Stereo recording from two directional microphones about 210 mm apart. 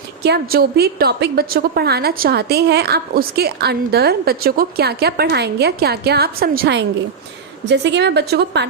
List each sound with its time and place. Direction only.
0.2 s a woman's voice: 50° right (ahead or behind)